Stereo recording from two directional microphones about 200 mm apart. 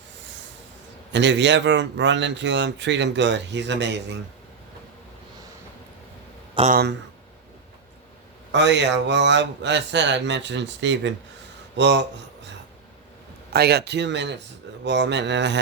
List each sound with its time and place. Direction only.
1.1 s speech: 60° right (ahead or behind)
6.7 s speech: 50° right (ahead or behind)
8.5 s speech: 60° right (ahead or behind)
13.5 s speech: 55° right (ahead or behind)